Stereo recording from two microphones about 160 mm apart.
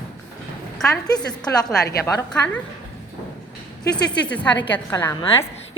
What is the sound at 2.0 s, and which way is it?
Speech, 10° left (ahead or behind).